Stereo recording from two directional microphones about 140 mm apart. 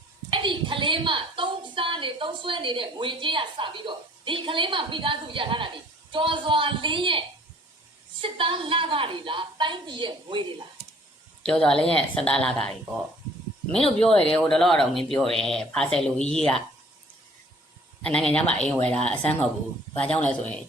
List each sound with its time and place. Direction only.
0.3 s a woman's voice: 35° right (ahead or behind)
11.4 s speech: 5° left (ahead or behind)
14.0 s speech: 5° left (ahead or behind)
18.0 s speech: 5° left (ahead or behind)